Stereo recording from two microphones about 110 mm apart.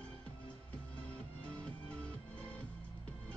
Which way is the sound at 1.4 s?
10° left (ahead or behind).